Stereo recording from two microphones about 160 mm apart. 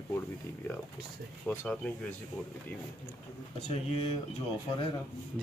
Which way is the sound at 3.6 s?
40° left (ahead or behind).